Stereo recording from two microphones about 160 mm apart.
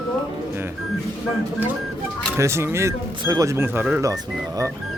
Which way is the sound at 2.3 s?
15° right (ahead or behind).